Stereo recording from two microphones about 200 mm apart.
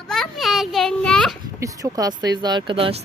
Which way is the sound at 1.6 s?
15° right (ahead or behind).